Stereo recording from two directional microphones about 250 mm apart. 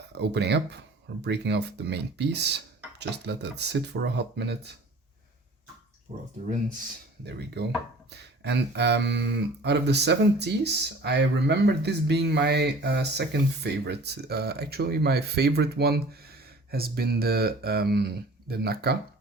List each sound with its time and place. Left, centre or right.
0.1 s speech: right
6.1 s speech: right
7.3 s speech: right